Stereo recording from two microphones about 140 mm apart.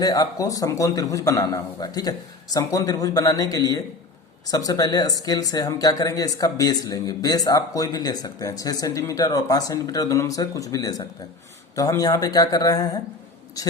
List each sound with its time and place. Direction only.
0.0 s speech: 25° left (ahead or behind)